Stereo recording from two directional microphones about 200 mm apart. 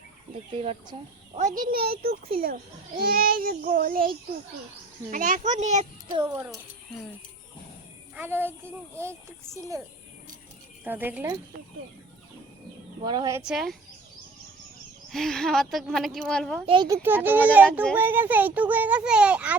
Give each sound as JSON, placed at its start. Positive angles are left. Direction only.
{"t": 0.6, "sound": "a child's voice", "side_deg": -30}
{"t": 1.4, "sound": "child singing", "side_deg": -40}
{"t": 5.1, "sound": "a child's voice", "side_deg": -40}
{"t": 8.1, "sound": "a child's voice", "side_deg": -10}
{"t": 10.8, "sound": "a child's voice", "side_deg": -10}
{"t": 13.1, "sound": "speech", "side_deg": -20}
{"t": 13.4, "sound": "speech", "side_deg": 0}
{"t": 15.1, "sound": "speech", "side_deg": 0}
{"t": 16.6, "sound": "speech", "side_deg": -25}
{"t": 17.0, "sound": "a child's voice", "side_deg": -10}